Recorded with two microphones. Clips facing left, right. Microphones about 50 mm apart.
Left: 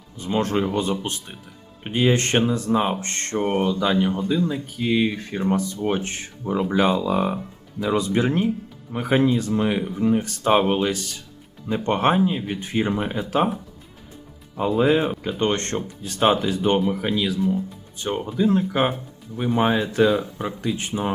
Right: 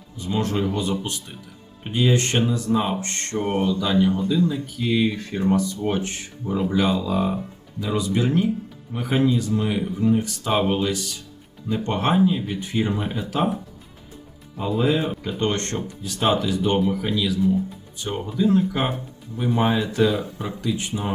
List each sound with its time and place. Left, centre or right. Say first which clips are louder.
0.2 s speech: left 2 dB; left
10.2 s speech: left 3 dB; left
14.8 s speech: left 3 dB; left